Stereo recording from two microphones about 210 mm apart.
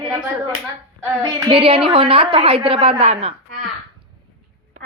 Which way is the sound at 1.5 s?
25° right (ahead or behind).